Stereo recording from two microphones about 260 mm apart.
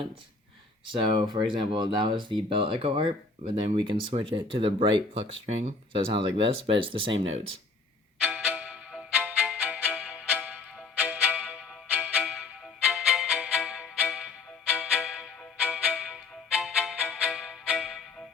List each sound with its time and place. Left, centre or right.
0.9 s speech: centre
8.3 s music: centre